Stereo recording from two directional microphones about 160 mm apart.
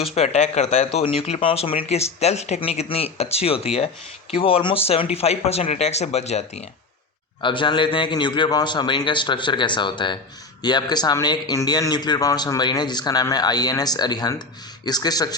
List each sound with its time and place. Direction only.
0.0 s speech: 40° left (ahead or behind)
7.4 s speech: 30° left (ahead or behind)